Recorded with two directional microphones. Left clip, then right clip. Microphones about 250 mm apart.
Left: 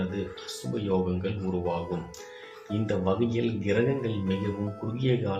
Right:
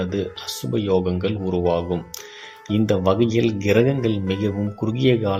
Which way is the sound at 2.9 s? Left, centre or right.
Right.